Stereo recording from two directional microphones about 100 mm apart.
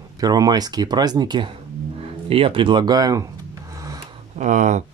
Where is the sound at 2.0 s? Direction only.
70° right (ahead or behind); by 3.3 s 40° right (ahead or behind).